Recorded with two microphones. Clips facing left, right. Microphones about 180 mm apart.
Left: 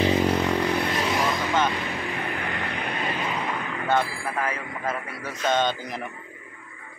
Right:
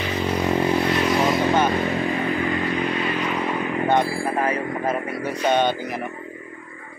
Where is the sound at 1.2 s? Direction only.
30° right (ahead or behind).